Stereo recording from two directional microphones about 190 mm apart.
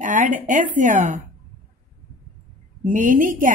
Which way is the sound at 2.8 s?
45° right (ahead or behind).